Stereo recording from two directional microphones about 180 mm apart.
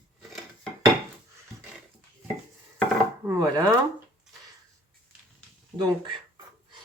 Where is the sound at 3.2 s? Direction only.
20° right (ahead or behind).